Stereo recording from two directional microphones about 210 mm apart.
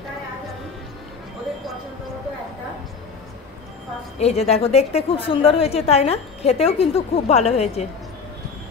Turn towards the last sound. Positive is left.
turn(degrees=30)  # may be behind; listen again after turning